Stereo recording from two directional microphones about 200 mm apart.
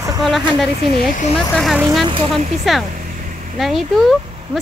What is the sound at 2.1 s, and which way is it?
Speech, 25° right (ahead or behind).